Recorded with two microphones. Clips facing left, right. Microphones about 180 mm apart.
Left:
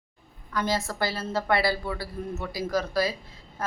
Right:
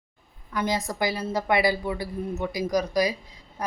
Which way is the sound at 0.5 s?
15° right (ahead or behind).